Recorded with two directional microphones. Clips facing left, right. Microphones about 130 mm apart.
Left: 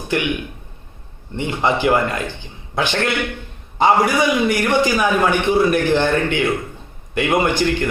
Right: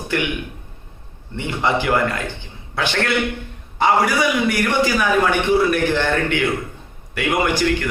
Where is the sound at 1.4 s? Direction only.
20° left (ahead or behind).